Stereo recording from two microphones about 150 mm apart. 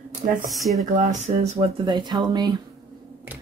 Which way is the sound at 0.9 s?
50° right (ahead or behind).